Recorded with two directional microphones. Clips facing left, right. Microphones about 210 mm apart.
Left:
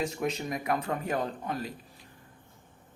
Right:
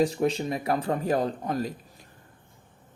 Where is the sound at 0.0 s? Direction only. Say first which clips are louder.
Right 7 dB; 30° right (ahead or behind).